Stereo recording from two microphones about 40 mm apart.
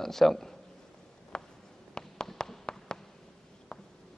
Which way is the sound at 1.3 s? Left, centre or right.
Centre.